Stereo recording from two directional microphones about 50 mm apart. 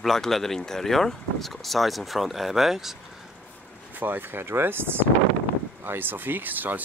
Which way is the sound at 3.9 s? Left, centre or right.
Right.